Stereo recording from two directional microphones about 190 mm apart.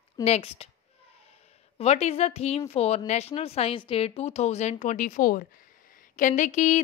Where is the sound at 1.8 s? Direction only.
35° left (ahead or behind).